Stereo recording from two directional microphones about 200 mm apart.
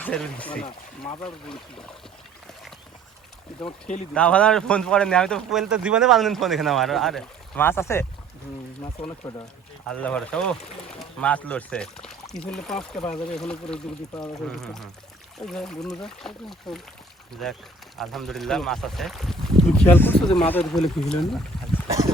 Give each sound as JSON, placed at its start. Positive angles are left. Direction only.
{"t": 0.0, "sound": "speech", "side_deg": 5}
{"t": 3.7, "sound": "speech", "side_deg": 35}
{"t": 4.1, "sound": "speech", "side_deg": 5}
{"t": 9.2, "sound": "speech", "side_deg": 10}
{"t": 21.8, "sound": "boat", "side_deg": -15}